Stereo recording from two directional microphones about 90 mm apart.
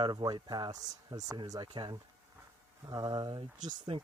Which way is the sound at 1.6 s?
65° right (ahead or behind).